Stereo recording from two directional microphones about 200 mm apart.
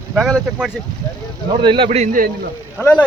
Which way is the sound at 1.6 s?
25° right (ahead or behind).